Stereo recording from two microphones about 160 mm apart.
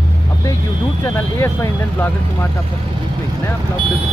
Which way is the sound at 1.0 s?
20° left (ahead or behind).